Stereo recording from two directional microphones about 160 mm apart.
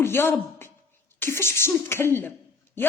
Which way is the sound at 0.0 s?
15° left (ahead or behind).